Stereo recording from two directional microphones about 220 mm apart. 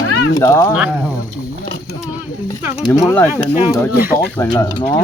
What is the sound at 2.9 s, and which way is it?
Speech, 10° left (ahead or behind).